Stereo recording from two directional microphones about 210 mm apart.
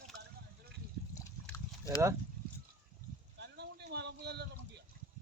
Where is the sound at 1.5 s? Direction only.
15° left (ahead or behind).